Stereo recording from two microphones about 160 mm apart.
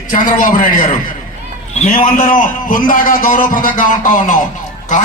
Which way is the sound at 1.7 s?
55° left (ahead or behind).